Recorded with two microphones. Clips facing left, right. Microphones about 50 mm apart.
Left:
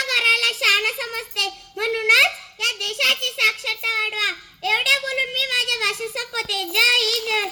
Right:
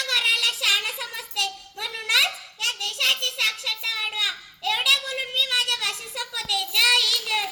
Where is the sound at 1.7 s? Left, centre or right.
Left.